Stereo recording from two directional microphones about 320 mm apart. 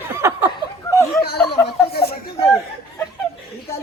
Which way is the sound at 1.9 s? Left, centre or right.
Left.